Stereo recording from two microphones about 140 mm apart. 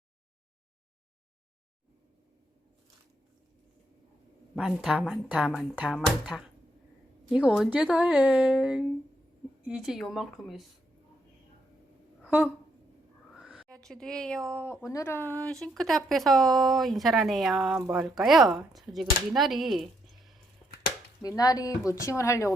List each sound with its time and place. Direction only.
4.5 s speech: centre (ahead or behind)
13.3 s a sound: 5° right (ahead or behind)
13.7 s speech: 5° left (ahead or behind)
14.7 s speech: 20° left (ahead or behind); by 20.3 s centre (ahead or behind)
21.2 s speech: 25° left (ahead or behind)